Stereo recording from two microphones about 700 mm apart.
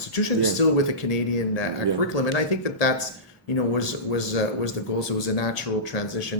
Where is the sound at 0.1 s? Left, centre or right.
Left.